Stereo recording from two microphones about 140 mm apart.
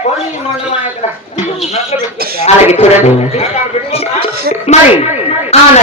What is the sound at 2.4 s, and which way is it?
Speech, 50° left (ahead or behind).